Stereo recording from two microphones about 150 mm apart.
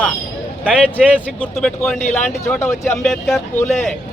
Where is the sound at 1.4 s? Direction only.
5° left (ahead or behind).